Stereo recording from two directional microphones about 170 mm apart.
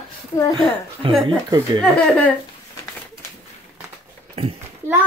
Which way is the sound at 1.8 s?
5° left (ahead or behind).